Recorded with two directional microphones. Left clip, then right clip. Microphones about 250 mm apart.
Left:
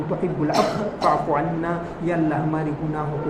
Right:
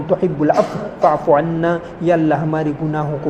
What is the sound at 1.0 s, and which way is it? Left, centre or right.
A man's voice, right.